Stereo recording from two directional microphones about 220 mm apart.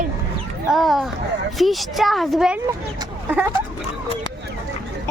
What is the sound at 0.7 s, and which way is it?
Speech, centre (ahead or behind).